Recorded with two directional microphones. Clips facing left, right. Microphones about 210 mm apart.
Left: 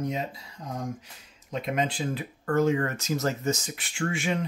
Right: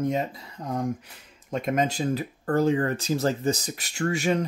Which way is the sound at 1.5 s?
45° right (ahead or behind).